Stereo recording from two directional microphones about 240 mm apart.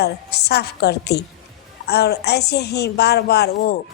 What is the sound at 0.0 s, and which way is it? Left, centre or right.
A woman's voice, left.